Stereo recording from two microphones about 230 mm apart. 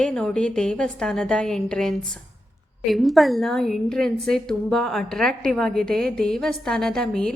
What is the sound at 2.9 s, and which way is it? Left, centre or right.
A woman's voice, centre.